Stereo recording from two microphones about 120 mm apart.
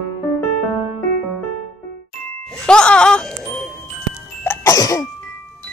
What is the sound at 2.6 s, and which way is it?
Music, 10° left (ahead or behind).